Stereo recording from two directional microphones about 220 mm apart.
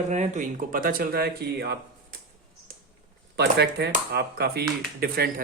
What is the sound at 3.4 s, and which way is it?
Speech, 50° right (ahead or behind).